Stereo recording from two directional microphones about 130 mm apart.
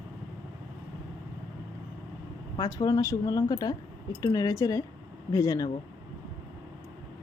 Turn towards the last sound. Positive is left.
turn(degrees=25)  # may be behind; listen again after turning